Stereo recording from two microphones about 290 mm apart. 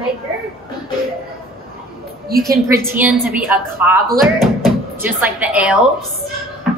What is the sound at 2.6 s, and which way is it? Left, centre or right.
A woman's voice, centre.